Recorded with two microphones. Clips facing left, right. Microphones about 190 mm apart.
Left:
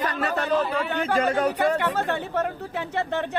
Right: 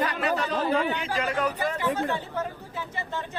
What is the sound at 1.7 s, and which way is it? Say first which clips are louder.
Speech: left 2 dB; 65° left (ahead or behind).